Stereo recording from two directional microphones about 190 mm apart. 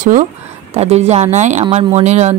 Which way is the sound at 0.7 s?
35° right (ahead or behind).